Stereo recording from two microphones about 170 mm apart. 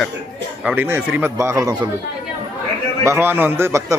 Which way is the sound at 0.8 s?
15° right (ahead or behind).